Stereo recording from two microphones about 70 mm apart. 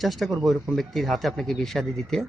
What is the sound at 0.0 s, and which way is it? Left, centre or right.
Speech, centre.